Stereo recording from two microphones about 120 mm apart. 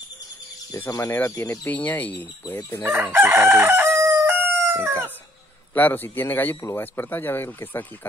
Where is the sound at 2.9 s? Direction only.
15° right (ahead or behind).